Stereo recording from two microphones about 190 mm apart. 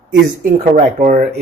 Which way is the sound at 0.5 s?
40° right (ahead or behind).